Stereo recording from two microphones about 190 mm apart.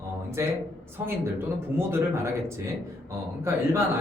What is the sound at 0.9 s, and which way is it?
Speech, 10° right (ahead or behind).